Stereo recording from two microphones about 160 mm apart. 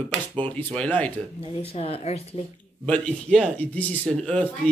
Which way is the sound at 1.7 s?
40° left (ahead or behind).